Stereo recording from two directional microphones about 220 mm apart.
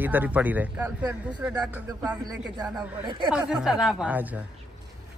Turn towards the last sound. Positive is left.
turn(degrees=-5)  # may be behind; listen again after turning